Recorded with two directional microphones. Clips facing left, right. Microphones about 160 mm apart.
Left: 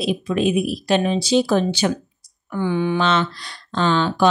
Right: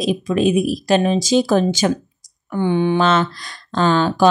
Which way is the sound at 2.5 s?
30° right (ahead or behind).